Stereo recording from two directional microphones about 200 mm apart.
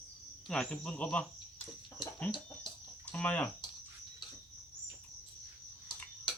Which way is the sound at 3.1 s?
5° left (ahead or behind).